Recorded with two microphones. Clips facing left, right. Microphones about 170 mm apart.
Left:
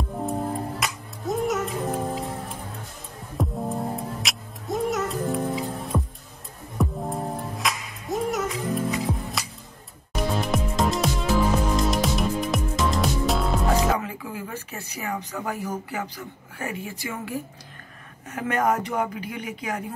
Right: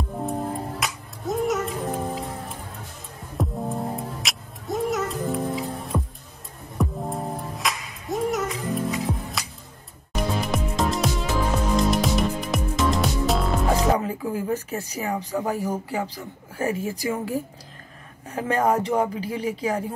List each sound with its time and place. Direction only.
0.1 s music: centre (ahead or behind)
3.3 s music: centre (ahead or behind)
13.9 s a woman's voice: 40° right (ahead or behind)